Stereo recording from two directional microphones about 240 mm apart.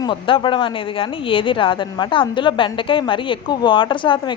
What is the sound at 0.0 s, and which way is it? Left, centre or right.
A woman's voice, left.